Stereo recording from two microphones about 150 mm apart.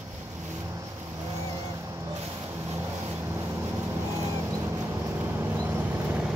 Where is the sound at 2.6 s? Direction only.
15° right (ahead or behind).